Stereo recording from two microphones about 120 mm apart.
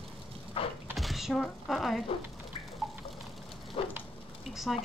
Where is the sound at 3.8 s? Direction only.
55° left (ahead or behind).